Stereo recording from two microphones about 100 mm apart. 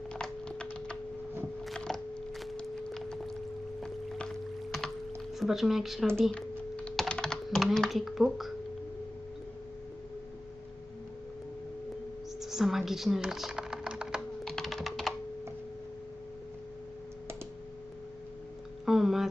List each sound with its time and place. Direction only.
0.1 s tuning fork: 10° left (ahead or behind)
1.6 s a sound: 5° left (ahead or behind)
3.8 s music: 5° left (ahead or behind)
5.3 s speech: centre (ahead or behind)
6.9 s typing: 5° left (ahead or behind)
12.4 s typing: 5° right (ahead or behind)
14.4 s computer keyboard: centre (ahead or behind)
18.9 s a sound: 5° right (ahead or behind)